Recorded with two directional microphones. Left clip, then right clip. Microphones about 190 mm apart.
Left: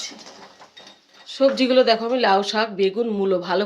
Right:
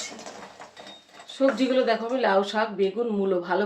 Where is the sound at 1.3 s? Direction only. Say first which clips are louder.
Left 6 dB; 45° left (ahead or behind).